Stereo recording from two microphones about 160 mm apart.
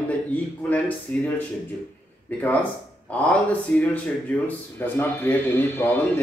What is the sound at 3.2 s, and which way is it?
Speech, 10° left (ahead or behind).